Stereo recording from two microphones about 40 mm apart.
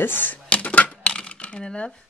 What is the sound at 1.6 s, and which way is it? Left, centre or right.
Speech, centre.